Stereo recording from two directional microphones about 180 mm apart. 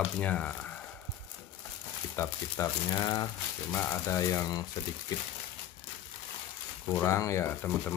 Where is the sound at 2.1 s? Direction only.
15° left (ahead or behind).